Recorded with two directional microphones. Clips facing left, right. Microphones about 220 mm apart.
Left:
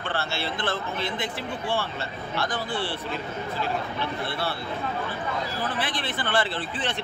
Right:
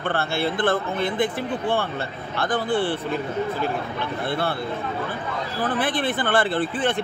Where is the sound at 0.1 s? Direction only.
55° right (ahead or behind).